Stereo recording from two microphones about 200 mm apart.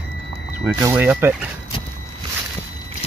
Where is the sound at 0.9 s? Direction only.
10° right (ahead or behind).